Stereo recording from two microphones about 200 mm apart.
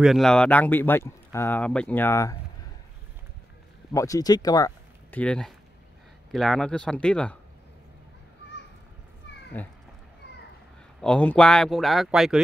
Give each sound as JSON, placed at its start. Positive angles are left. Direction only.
{"t": 0.0, "sound": "speech", "side_deg": 0}
{"t": 3.9, "sound": "speech", "side_deg": 15}
{"t": 5.2, "sound": "speech", "side_deg": 5}
{"t": 9.6, "sound": "speech", "side_deg": 10}
{"t": 11.0, "sound": "speech", "side_deg": 5}